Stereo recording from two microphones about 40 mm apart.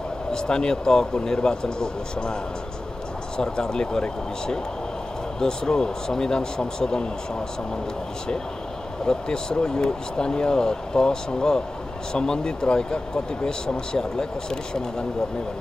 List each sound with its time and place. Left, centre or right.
0.3 s speech: centre
3.3 s speech: centre
9.0 s speech: centre